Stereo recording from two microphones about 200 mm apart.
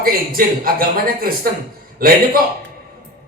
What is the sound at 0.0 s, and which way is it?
A man's voice, 45° right (ahead or behind).